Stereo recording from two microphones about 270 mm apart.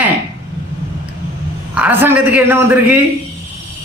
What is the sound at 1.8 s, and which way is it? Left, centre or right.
A woman's voice, centre.